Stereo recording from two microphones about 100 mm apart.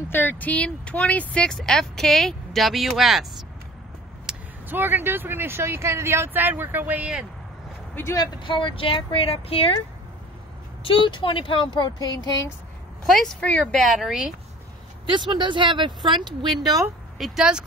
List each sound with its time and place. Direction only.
0.1 s speech: 20° left (ahead or behind); by 3.4 s centre (ahead or behind)
4.3 s vehicle: 5° right (ahead or behind)
4.6 s speech: 20° right (ahead or behind)
7.9 s speech: 25° left (ahead or behind)
8.2 s speech: 55° left (ahead or behind); by 9.8 s 70° left (ahead or behind)
10.8 s speech: 60° left (ahead or behind); by 12.4 s 40° left (ahead or behind)
13.0 s speech: centre (ahead or behind)
13.4 s speech: 10° left (ahead or behind); by 14.3 s 5° right (ahead or behind)
15.0 s speech: 50° right (ahead or behind)
17.2 s speech: 5° right (ahead or behind)